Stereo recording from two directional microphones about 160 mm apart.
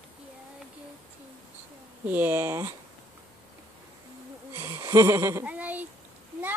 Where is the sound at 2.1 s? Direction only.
10° right (ahead or behind).